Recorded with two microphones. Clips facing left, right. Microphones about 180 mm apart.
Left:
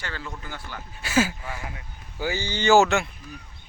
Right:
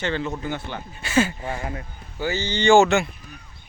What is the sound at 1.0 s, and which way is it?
Speech, 5° left (ahead or behind).